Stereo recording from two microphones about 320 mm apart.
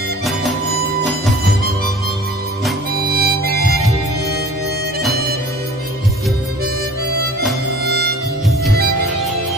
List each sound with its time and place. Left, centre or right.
0.2 s music: centre
3.1 s harmonica: right
7.8 s music: right